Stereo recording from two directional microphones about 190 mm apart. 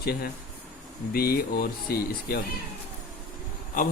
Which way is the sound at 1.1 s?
55° left (ahead or behind).